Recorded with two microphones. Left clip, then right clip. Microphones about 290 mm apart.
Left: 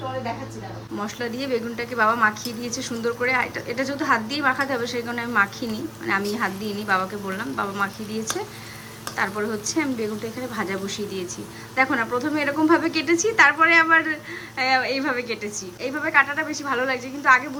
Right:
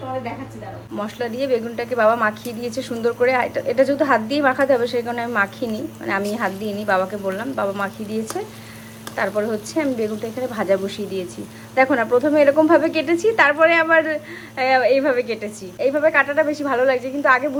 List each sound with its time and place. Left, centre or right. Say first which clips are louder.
0.9 s a woman's voice: right 4 dB; centre